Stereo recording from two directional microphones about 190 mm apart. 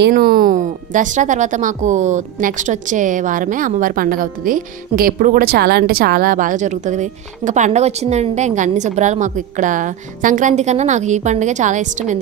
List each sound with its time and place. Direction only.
0.0 s a woman's voice: 50° right (ahead or behind)